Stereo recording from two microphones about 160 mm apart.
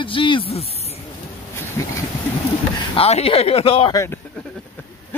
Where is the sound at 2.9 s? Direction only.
40° left (ahead or behind).